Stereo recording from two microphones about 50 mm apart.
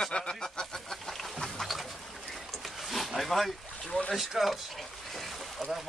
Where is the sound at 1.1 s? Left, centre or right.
Centre.